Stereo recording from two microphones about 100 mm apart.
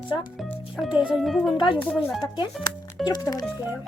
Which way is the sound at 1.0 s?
10° right (ahead or behind).